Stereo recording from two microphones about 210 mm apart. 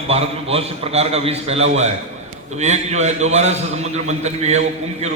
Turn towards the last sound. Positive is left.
turn(degrees=-30)  # may be behind; listen again after turning